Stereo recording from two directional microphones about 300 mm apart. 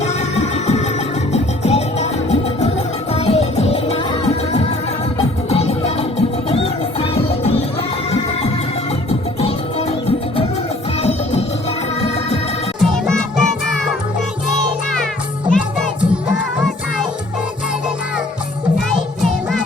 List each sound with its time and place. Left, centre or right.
0.0 s music: left
9.0 s music: left
11.0 s music: left
12.8 s music: centre
15.4 s music: centre
18.9 s music: centre